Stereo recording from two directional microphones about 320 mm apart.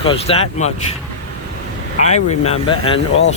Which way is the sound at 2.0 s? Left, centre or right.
Left.